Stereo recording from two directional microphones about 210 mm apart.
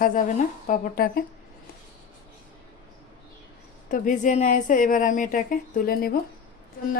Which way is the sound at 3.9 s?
35° left (ahead or behind).